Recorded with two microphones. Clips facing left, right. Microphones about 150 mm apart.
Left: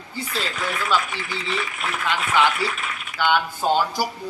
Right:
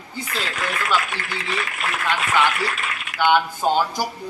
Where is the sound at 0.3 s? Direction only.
85° right.